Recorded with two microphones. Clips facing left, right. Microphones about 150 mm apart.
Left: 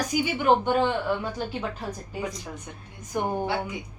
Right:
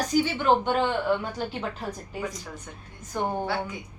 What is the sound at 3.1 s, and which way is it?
Speech, 15° left (ahead or behind).